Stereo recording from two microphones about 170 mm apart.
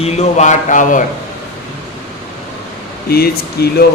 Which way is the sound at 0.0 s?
40° left (ahead or behind).